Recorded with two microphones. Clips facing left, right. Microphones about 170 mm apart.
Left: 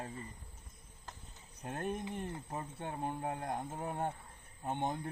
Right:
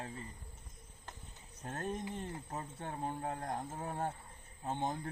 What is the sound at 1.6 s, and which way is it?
Speech, 10° left (ahead or behind).